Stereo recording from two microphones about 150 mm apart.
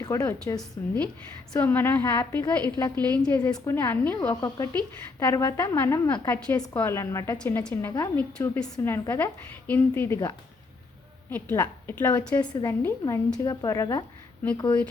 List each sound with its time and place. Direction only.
0.0 s a woman's voice: 20° left (ahead or behind)
2.9 s a woman's voice: 10° left (ahead or behind)
7.3 s a woman's voice: 10° left (ahead or behind)
8.4 s a woman's voice: 5° left (ahead or behind)
12.4 s a woman's voice: 25° left (ahead or behind)
12.8 s a woman's voice: 15° left (ahead or behind)
13.4 s a woman's voice: 25° left (ahead or behind)